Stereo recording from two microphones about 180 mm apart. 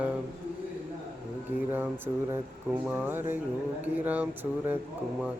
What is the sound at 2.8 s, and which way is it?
Speech, 10° right (ahead or behind).